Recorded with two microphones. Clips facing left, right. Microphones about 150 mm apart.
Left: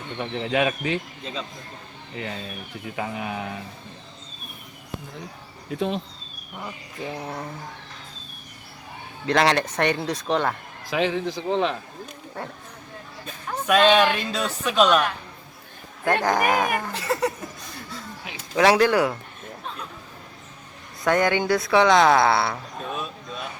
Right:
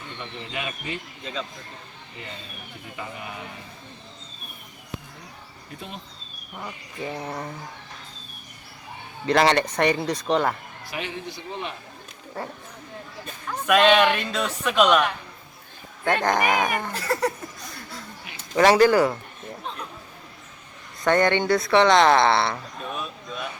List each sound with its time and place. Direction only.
0.2 s speech: 90° left
2.9 s speech: 90° left
6.6 s speech: centre (ahead or behind)
9.2 s speech: centre (ahead or behind)
10.8 s speech: 90° left
12.4 s speech: centre (ahead or behind)
13.7 s speech: centre (ahead or behind)
16.0 s speech: 5° left (ahead or behind)
18.5 s speech: centre (ahead or behind)
21.0 s speech: 5° left (ahead or behind)